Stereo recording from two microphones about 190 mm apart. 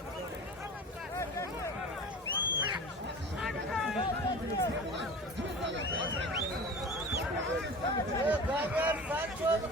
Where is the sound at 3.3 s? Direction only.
Centre (ahead or behind).